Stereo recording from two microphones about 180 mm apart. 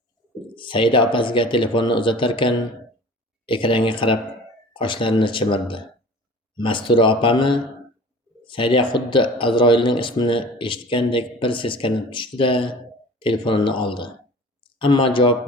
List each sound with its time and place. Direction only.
0.5 s speech: 30° left (ahead or behind)